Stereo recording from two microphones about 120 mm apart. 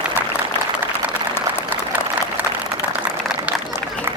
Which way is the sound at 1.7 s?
15° right (ahead or behind).